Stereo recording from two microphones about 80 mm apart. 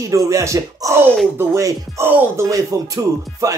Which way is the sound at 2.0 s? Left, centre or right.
Right.